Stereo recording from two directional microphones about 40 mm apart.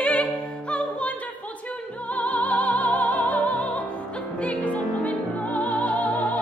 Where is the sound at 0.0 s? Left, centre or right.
Left.